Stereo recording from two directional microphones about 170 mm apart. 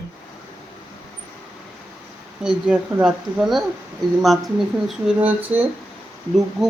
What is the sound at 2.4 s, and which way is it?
Speech, 5° right (ahead or behind).